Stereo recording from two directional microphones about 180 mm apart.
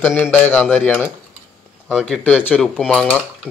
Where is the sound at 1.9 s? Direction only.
5° left (ahead or behind).